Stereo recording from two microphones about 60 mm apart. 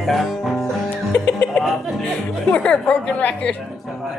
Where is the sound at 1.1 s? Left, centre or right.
Left.